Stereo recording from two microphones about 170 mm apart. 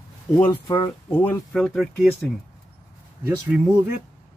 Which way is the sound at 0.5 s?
30° left (ahead or behind).